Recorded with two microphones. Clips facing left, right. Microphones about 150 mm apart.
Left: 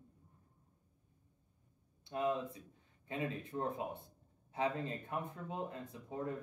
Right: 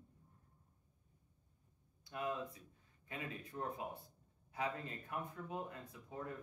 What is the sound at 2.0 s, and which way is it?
Speech, 25° left (ahead or behind).